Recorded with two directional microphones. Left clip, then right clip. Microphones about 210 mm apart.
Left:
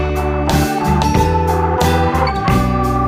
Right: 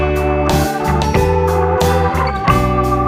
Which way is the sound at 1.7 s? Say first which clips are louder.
Even; centre (ahead or behind).